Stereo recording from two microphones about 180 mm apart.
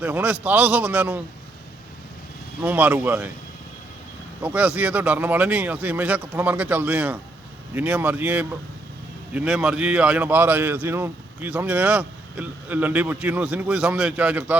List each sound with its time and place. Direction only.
0.0 s a man's voice: 10° right (ahead or behind)
2.6 s a man's voice: 10° right (ahead or behind)
4.4 s a man's voice: 5° right (ahead or behind)